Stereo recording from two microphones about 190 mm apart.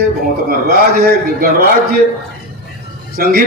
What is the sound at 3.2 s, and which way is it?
Speech, 50° right (ahead or behind).